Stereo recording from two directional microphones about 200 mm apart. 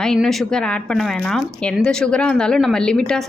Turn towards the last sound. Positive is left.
turn(degrees=5)  # may be behind; listen again after turning